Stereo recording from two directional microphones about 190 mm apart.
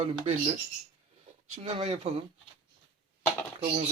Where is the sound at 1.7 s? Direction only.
30° right (ahead or behind).